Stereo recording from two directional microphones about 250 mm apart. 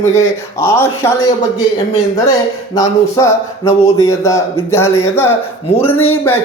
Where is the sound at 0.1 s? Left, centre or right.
Centre.